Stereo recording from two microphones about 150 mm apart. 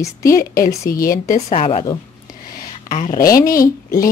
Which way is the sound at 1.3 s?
45° left (ahead or behind).